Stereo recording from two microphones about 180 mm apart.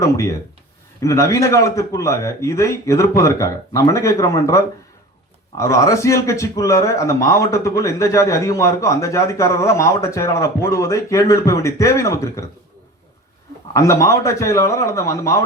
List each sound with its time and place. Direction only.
1.0 s speech: 15° left (ahead or behind)
13.7 s speech: 15° left (ahead or behind)